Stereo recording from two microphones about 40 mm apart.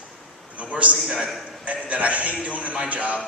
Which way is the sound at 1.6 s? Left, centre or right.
Right.